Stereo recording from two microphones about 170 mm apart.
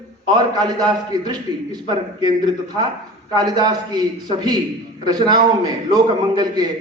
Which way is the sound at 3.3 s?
25° right (ahead or behind).